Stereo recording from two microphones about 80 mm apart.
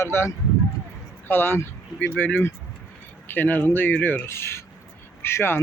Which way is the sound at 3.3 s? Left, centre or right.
Left.